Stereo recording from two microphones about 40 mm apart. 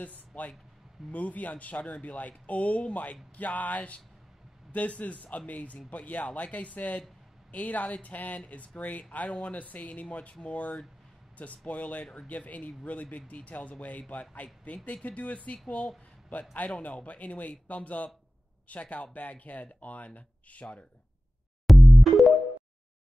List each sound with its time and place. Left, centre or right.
0.3 s speech: left
21.6 s music: centre